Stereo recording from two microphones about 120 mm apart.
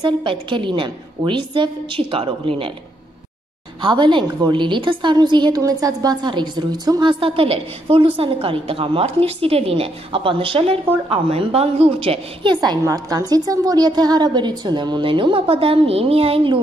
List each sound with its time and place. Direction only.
0.0 s a woman's voice: 40° right (ahead or behind)
3.8 s a woman's voice: 40° right (ahead or behind)
12.5 s a woman's voice: 30° right (ahead or behind); by 16.5 s 50° right (ahead or behind)